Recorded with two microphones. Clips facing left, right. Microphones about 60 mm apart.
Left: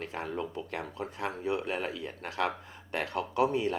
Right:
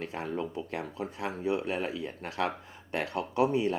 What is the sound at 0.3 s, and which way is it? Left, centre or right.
Speech, right.